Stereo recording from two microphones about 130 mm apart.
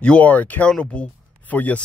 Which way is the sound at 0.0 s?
10° left (ahead or behind).